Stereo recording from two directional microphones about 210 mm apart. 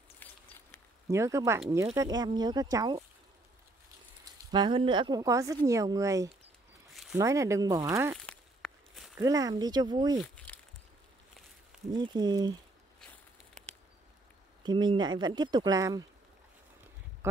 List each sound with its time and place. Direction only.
0.2 s a sound: 10° left (ahead or behind)
1.0 s speech: 15° right (ahead or behind)
4.2 s speech: 20° right (ahead or behind)
6.9 s zipper: centre (ahead or behind)
7.2 s speech: 15° right (ahead or behind)
8.3 s walk: centre (ahead or behind)
9.2 s speech: 15° right (ahead or behind)
10.2 s crumpling: 5° left (ahead or behind)
11.9 s speech: 20° right (ahead or behind)
14.6 s speech: 20° right (ahead or behind)